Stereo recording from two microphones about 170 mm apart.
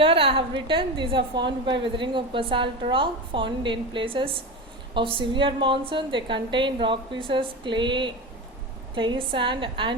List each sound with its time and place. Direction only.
0.0 s a woman's voice: 30° right (ahead or behind)